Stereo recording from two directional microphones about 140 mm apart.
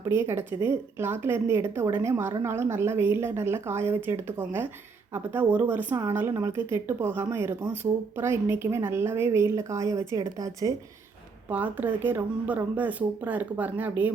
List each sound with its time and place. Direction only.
0.0 s a woman's voice: 20° right (ahead or behind)
11.4 s speech: 10° right (ahead or behind)